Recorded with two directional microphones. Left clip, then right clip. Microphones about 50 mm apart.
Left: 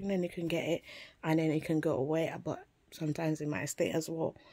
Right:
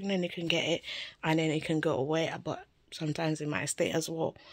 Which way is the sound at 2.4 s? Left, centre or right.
Left.